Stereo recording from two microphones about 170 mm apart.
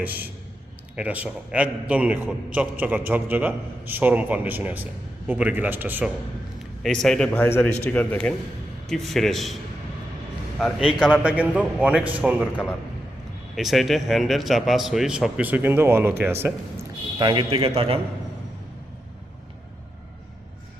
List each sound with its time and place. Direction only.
0.9 s a man's voice: 10° right (ahead or behind)
6.8 s a man's voice: 5° left (ahead or behind)
10.6 s a man's voice: 5° right (ahead or behind)
17.2 s a man's voice: 30° right (ahead or behind)